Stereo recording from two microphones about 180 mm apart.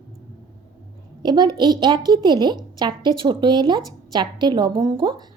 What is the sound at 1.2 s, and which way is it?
A woman's voice, 25° right (ahead or behind).